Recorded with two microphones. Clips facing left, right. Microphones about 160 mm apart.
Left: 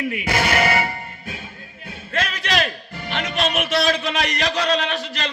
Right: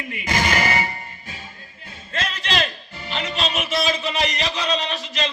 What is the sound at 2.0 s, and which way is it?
Music, 55° left (ahead or behind).